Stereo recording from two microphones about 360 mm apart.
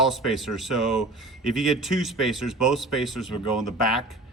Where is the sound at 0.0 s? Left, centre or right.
Centre.